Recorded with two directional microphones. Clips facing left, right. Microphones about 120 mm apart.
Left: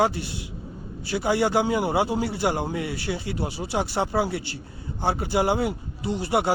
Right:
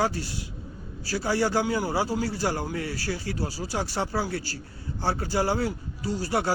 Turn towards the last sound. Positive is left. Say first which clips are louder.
# left 3 dB
turn(degrees=20)  # may be behind; listen again after turning